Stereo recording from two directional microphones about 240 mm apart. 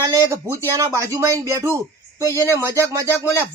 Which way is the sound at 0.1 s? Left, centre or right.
Centre.